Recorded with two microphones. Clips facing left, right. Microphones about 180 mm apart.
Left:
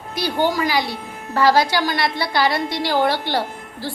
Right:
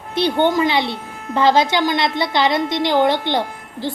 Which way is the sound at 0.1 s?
25° right (ahead or behind).